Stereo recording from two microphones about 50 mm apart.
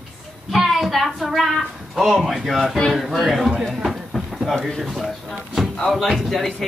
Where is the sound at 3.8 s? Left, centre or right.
Centre.